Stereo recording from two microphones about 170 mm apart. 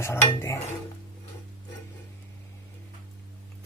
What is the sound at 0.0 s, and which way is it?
Speech, 15° left (ahead or behind).